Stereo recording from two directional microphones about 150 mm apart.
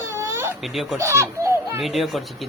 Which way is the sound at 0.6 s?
Centre (ahead or behind).